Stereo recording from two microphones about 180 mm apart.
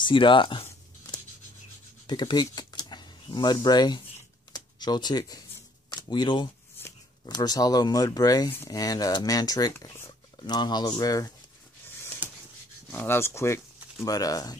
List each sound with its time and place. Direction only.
0.0 s speech: 25° left (ahead or behind)
1.1 s writing: 20° left (ahead or behind)
2.0 s speech: 25° left (ahead or behind)
4.5 s a sound: 25° left (ahead or behind)
5.9 s speech: 25° left (ahead or behind)
12.9 s speech: 15° left (ahead or behind)